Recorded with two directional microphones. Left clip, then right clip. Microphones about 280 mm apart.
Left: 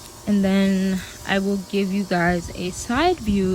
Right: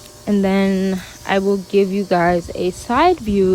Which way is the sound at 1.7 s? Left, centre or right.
Centre.